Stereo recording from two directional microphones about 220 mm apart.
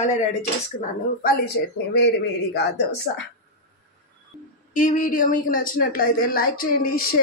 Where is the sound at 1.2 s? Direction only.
45° left (ahead or behind).